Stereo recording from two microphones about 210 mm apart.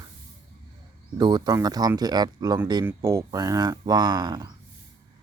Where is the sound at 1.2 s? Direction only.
20° right (ahead or behind).